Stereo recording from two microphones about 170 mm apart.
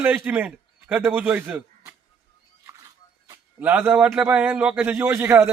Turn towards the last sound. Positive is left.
turn(degrees=-15)  # may be behind; listen again after turning